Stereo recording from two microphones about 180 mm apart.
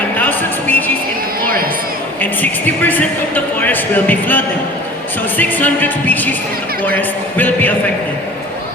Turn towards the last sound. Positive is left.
turn(degrees=10)  # may be behind; listen again after turning